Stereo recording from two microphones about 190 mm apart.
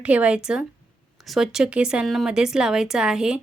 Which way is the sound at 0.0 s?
5° right (ahead or behind).